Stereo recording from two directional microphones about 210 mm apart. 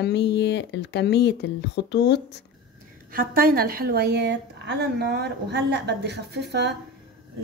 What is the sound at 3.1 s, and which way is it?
A woman's voice, 45° right (ahead or behind).